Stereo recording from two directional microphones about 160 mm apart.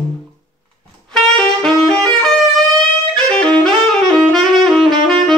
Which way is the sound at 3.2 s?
5° left (ahead or behind).